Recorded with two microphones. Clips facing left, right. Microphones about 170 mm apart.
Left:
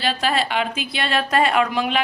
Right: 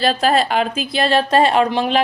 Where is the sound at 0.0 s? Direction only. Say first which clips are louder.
Right 6 dB; 40° right (ahead or behind).